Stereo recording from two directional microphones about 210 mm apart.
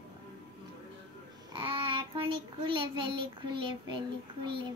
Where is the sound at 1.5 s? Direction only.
25° right (ahead or behind).